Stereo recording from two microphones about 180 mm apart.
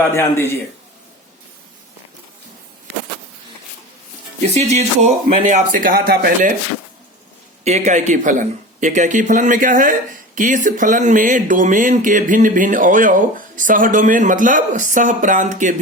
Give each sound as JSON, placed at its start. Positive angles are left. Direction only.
{"t": 0.1, "sound": "a man's voice", "side_deg": 15}
{"t": 4.5, "sound": "speech", "side_deg": -40}
{"t": 7.6, "sound": "speech", "side_deg": -40}